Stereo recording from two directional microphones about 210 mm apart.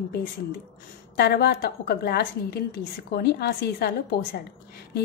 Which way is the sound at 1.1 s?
50° left (ahead or behind).